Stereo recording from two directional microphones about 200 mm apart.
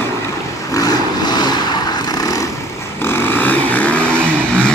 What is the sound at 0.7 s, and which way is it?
Vehicle, 20° left (ahead or behind).